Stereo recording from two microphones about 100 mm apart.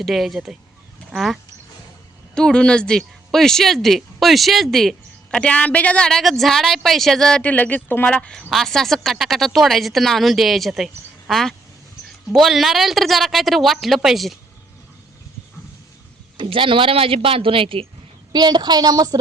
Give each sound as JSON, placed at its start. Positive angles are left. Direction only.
{"t": 0.0, "sound": "speech", "side_deg": 0}
{"t": 16.4, "sound": "a man's voice", "side_deg": -60}
{"t": 18.3, "sound": "a woman's voice", "side_deg": -45}